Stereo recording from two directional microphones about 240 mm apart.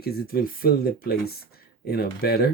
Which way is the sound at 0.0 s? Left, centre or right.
Left.